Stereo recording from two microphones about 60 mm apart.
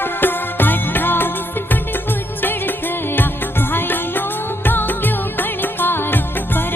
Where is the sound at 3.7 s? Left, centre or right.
Left.